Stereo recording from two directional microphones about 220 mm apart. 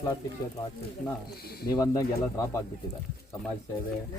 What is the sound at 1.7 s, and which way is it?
Speech, 15° left (ahead or behind).